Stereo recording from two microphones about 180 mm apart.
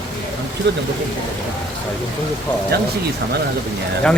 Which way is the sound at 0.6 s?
85° right.